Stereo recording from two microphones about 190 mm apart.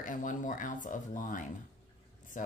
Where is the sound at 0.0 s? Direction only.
45° left (ahead or behind).